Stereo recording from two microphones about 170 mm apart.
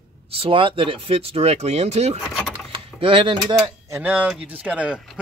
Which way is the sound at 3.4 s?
25° right (ahead or behind).